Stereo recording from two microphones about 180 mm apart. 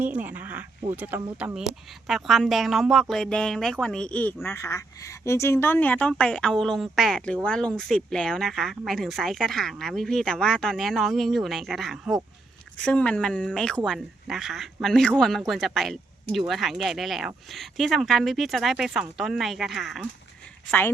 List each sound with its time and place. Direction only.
0.0 s a woman's voice: 10° right (ahead or behind)
20.7 s speech: 10° left (ahead or behind)